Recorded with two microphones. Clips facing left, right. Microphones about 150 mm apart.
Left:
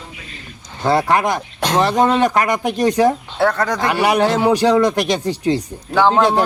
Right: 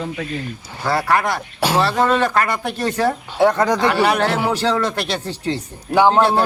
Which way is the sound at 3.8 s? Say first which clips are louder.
Left 5 dB; 15° left (ahead or behind).